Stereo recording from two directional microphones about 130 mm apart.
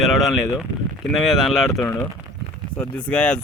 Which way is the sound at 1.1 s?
Centre (ahead or behind).